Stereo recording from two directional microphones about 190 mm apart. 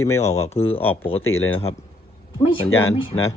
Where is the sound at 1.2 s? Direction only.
90° left.